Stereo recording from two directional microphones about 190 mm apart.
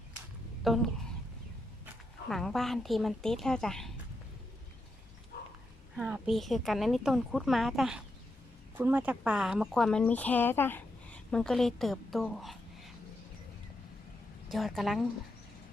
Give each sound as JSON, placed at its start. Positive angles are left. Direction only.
{"t": 0.6, "sound": "a woman's voice", "side_deg": 0}
{"t": 2.3, "sound": "speech", "side_deg": 0}
{"t": 5.3, "sound": "dog", "side_deg": 55}
{"t": 6.0, "sound": "speech", "side_deg": -5}
{"t": 14.5, "sound": "speech", "side_deg": 0}